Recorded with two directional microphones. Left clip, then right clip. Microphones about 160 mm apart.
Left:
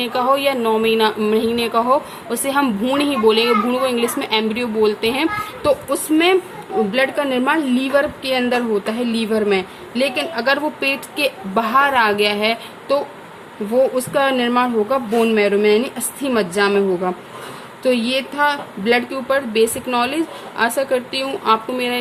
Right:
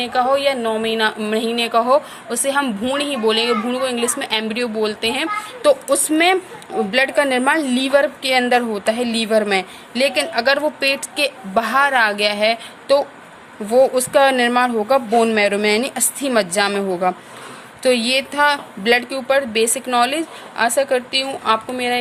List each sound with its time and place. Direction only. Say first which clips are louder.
0.0 s a woman's voice: even; 20° right (ahead or behind)